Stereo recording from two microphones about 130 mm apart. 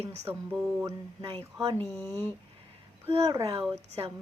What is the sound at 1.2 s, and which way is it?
Speech, 45° right (ahead or behind).